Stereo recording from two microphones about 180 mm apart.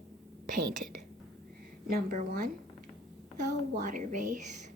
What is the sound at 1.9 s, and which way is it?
Speech, 55° right (ahead or behind).